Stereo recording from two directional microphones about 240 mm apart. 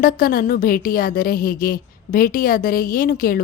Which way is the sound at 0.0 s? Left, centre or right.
Left.